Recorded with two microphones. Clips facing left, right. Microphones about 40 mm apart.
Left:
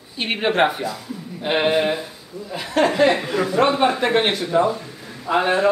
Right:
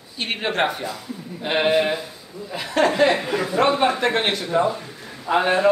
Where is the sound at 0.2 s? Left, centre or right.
Centre.